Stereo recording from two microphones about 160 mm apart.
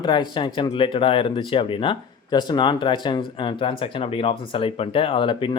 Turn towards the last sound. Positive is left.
turn(degrees=30)  # may be behind; listen again after turning